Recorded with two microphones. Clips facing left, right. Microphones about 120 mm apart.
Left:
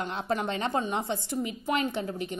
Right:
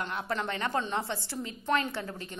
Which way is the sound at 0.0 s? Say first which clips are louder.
Left 3 dB; 20° left (ahead or behind).